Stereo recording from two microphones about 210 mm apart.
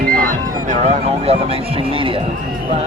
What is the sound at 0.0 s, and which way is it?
Music, 45° right (ahead or behind).